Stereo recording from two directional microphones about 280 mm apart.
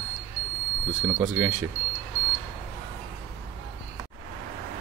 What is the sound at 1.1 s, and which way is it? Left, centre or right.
Speech, centre.